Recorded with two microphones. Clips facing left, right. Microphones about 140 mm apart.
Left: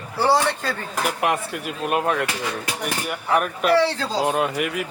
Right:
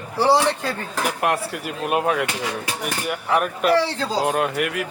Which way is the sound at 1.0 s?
Centre (ahead or behind).